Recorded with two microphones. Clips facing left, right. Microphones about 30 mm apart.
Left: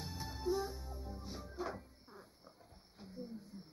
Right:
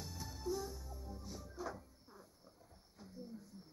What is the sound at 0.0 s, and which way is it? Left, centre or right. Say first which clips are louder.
Music: left 4 dB; left.